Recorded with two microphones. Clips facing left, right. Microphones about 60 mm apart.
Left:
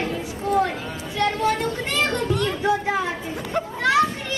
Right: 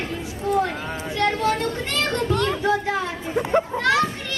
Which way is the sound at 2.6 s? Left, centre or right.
Centre.